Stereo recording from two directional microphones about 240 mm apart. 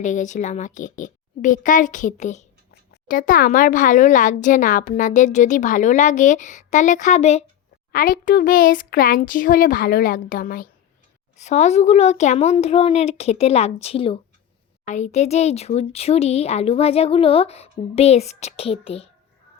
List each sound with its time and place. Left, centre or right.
0.0 s a woman's voice: left